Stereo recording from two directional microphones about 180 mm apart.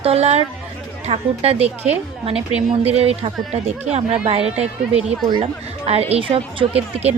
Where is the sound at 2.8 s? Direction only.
35° right (ahead or behind).